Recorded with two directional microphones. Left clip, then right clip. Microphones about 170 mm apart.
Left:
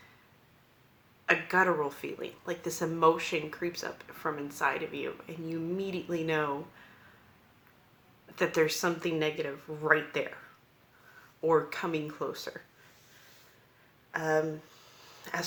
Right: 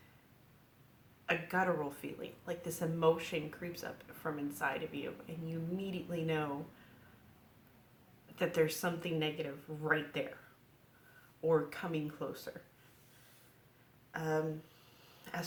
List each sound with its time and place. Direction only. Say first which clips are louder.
1.2 s speech: left 8 dB; 20° left (ahead or behind)
8.4 s speech: left 5 dB; 20° left (ahead or behind)
11.4 s speech: left 6 dB; 25° left (ahead or behind)
14.1 s speech: left 7 dB; 20° left (ahead or behind)
15.2 s a sound: left 8 dB; 20° left (ahead or behind)